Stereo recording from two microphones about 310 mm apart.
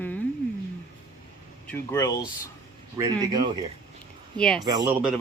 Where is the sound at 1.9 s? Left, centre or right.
Centre.